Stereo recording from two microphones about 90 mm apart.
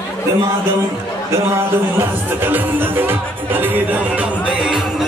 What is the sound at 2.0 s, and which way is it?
Speech, 25° right (ahead or behind).